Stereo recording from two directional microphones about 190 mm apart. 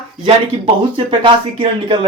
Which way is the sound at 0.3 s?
30° right (ahead or behind).